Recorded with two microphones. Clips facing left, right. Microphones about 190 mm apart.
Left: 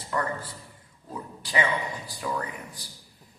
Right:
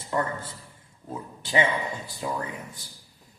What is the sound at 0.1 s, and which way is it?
A man's voice, 25° right (ahead or behind).